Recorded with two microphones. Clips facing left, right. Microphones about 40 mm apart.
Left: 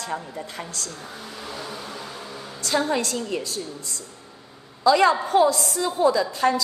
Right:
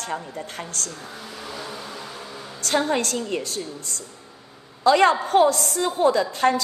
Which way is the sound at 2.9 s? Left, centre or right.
Right.